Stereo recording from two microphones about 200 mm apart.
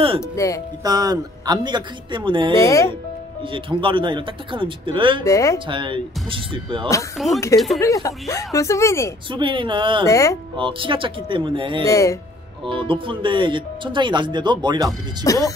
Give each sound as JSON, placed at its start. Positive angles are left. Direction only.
{"t": 0.2, "sound": "speech", "side_deg": 15}
{"t": 0.8, "sound": "speech", "side_deg": -20}
{"t": 2.5, "sound": "speech", "side_deg": 15}
{"t": 3.5, "sound": "speech", "side_deg": -25}
{"t": 5.2, "sound": "speech", "side_deg": 15}
{"t": 5.7, "sound": "speech", "side_deg": -25}
{"t": 7.3, "sound": "speech", "side_deg": 15}
{"t": 9.3, "sound": "speech", "side_deg": -25}
{"t": 10.0, "sound": "speech", "side_deg": 15}
{"t": 10.5, "sound": "speech", "side_deg": -25}
{"t": 11.8, "sound": "speech", "side_deg": 15}
{"t": 12.6, "sound": "speech", "side_deg": -25}
{"t": 15.2, "sound": "speech", "side_deg": 15}